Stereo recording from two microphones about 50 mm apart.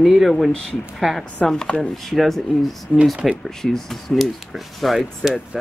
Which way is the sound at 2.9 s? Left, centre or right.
Left.